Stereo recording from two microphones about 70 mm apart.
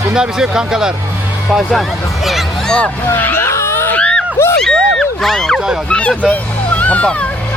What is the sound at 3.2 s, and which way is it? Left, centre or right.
Vehicle, left.